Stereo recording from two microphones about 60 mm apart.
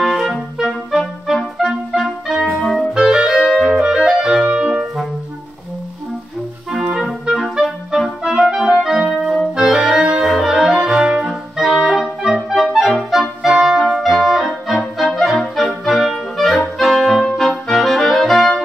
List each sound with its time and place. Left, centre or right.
0.6 s music: centre
2.5 s clarinet: centre
2.9 s clarinet: centre
4.5 s brass instrument: centre
7.0 s clarinet: centre
8.2 s clarinet: centre
9.1 s organ: centre
9.6 s music: centre
11.5 s clarinet: centre